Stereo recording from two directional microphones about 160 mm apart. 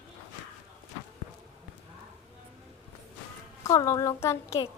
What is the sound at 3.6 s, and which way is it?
A child's voice, 20° left (ahead or behind).